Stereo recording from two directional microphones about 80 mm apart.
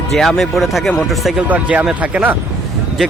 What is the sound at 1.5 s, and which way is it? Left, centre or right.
Speech, centre.